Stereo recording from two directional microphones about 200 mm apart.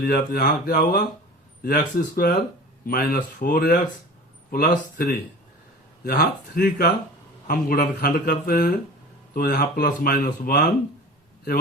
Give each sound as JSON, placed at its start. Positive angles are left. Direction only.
{"t": 0.0, "sound": "speech", "side_deg": 45}